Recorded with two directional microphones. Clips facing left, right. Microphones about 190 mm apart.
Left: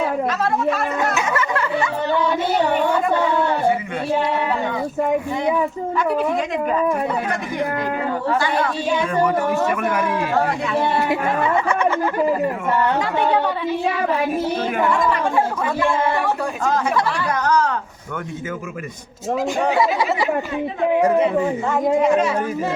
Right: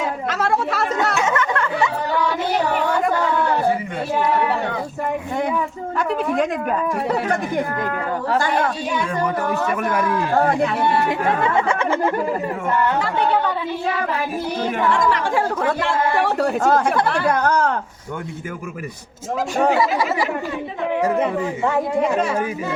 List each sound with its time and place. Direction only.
0.3 s speech: 80° right
1.1 s a sound: 5° left (ahead or behind)
6.3 s speech: 55° right (ahead or behind)
8.4 s speech: 45° right (ahead or behind)
10.3 s speech: 55° right (ahead or behind)
11.7 s a sound: 25° right (ahead or behind)
14.9 s speech: 90° right
16.6 s speech: 55° right (ahead or behind)